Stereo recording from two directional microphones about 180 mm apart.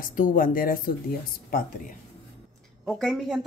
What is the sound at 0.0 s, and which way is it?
Speech, 50° left (ahead or behind).